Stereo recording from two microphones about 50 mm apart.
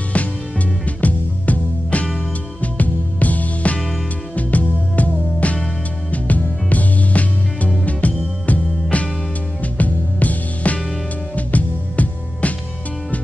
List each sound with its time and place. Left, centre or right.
0.1 s music: left